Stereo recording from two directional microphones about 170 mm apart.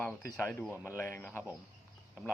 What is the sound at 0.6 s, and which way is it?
Speech, 10° right (ahead or behind).